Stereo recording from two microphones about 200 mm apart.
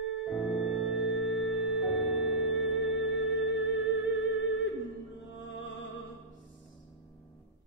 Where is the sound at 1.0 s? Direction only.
65° left (ahead or behind).